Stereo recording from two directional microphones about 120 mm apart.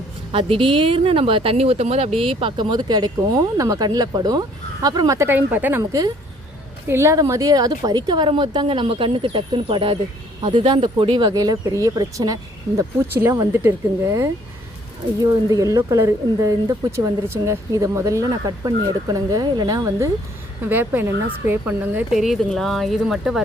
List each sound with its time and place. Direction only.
0.3 s a woman's voice: 50° right (ahead or behind); by 5.8 s 15° right (ahead or behind)
5.8 s a woman's voice: 30° right (ahead or behind)
20.7 s speech: 15° right (ahead or behind)
22.1 s speech: centre (ahead or behind)